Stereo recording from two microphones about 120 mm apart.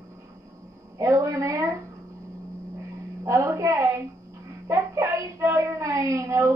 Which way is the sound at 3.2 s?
25° right (ahead or behind).